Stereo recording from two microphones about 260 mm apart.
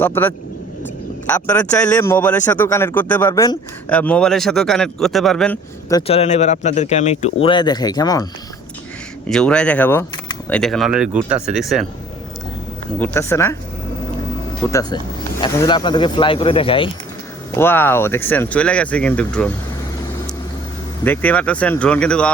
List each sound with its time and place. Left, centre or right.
0.0 s speech: centre
5.9 s speech: left
9.2 s speech: centre
13.0 s speech: centre
14.7 s speech: centre
17.6 s speech: centre
21.0 s speech: centre